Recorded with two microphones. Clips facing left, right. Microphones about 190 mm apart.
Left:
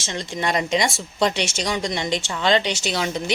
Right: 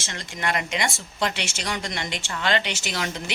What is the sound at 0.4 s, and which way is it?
A woman's voice, 20° left (ahead or behind).